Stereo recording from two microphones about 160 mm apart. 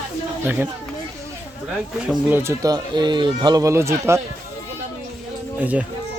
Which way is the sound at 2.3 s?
20° right (ahead or behind).